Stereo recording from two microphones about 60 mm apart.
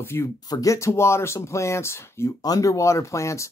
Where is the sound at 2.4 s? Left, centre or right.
Left.